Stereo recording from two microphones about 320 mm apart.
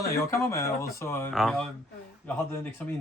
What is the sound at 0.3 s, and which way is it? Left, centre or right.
Speech, centre.